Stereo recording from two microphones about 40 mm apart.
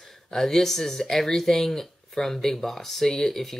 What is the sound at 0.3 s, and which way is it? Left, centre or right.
Speech, centre.